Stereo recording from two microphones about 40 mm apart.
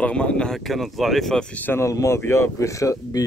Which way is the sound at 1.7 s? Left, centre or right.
Left.